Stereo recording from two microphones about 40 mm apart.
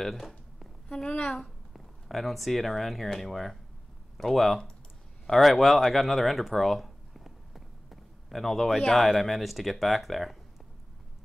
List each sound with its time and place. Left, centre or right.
0.0 s a sound: centre
0.8 s a woman's voice: centre
1.7 s speech: centre